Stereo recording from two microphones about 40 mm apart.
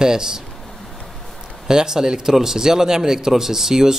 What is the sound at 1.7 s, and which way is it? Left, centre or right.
Speech, centre.